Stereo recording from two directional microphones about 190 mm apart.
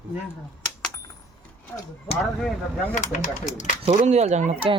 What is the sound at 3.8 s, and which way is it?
Speech, 35° right (ahead or behind).